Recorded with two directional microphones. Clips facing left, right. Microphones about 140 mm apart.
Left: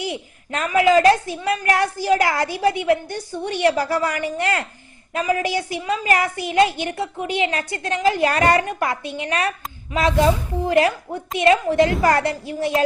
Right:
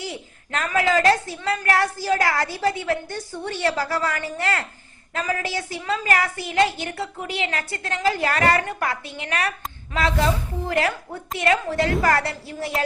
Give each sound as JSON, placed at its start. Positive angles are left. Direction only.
{"t": 0.0, "sound": "a woman's voice", "side_deg": 20}